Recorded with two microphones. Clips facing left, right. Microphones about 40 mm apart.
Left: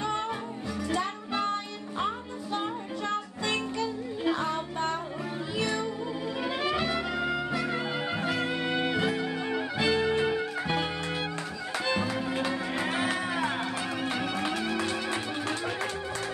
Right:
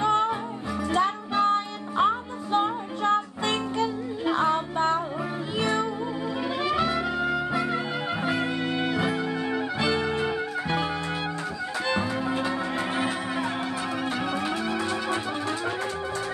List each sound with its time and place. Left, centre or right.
0.0 s music: right
6.4 s music: centre
12.4 s music: right
14.1 s music: centre
14.7 s music: centre